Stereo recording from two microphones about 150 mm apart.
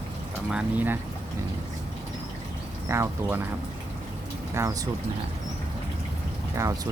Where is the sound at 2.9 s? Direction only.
20° right (ahead or behind).